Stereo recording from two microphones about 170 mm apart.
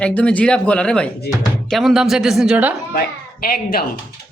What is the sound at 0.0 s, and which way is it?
Speech, 5° left (ahead or behind).